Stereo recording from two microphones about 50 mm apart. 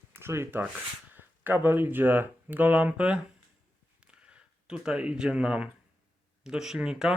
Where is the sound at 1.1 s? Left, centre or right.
Right.